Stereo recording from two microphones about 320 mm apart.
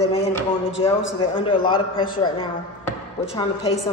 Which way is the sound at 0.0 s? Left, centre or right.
Centre.